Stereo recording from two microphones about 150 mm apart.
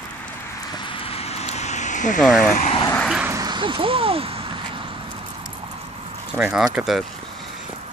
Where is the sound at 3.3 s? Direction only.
25° right (ahead or behind).